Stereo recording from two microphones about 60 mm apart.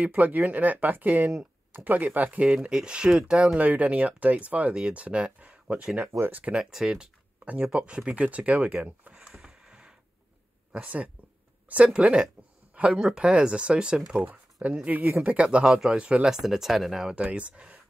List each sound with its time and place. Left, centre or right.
0.0 s speech: right
1.3 s a sound: right
1.9 s speech: right
3.5 s speech: right
6.1 s speech: right
6.5 s speech: centre
7.4 s speech: centre
9.1 s a sound: centre
10.7 s speech: right
14.2 s speech: right
15.2 s speech: centre
16.0 s speech: centre
16.3 s speech: centre
17.1 s speech: right